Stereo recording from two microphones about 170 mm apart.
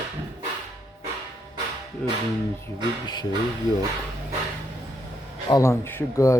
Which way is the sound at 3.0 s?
25° left (ahead or behind).